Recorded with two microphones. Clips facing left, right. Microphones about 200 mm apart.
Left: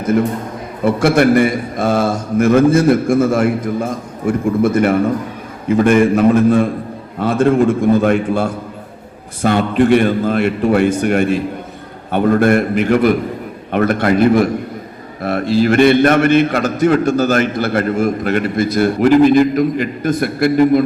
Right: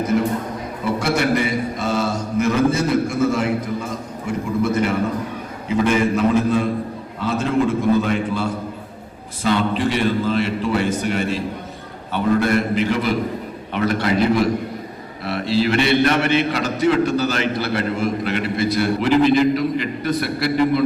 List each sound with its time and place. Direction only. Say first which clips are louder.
0.9 s a man's voice: left 8 dB; 50° left (ahead or behind)